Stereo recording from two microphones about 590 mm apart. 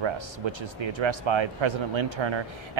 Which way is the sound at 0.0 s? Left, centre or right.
Right.